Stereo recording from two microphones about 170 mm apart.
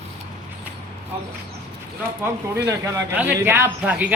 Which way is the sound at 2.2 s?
10° right (ahead or behind).